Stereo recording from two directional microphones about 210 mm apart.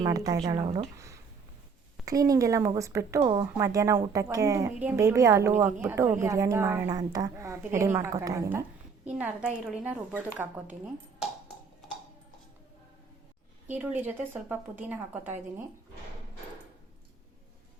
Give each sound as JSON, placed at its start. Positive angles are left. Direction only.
{"t": 0.0, "sound": "a woman's voice", "side_deg": -20}
{"t": 13.7, "sound": "a woman's voice", "side_deg": -10}